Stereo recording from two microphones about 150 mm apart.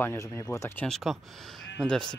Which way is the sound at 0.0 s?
15° left (ahead or behind).